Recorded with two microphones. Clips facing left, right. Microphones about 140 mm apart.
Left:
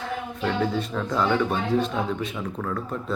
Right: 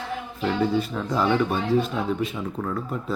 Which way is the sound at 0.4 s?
5° right (ahead or behind).